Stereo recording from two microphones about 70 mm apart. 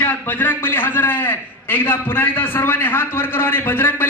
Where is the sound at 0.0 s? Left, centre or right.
Left.